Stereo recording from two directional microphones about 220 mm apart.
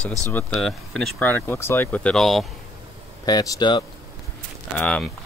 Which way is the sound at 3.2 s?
20° left (ahead or behind).